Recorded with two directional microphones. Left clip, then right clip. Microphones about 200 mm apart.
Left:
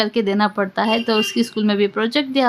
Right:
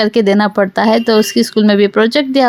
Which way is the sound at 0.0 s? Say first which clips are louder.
Right 7 dB; 35° right (ahead or behind).